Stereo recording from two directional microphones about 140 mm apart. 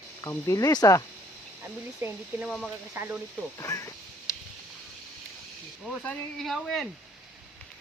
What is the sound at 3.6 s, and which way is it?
Speech, 25° left (ahead or behind).